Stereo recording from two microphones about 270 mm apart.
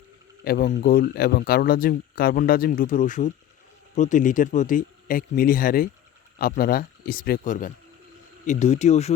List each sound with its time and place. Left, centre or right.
0.4 s speech: left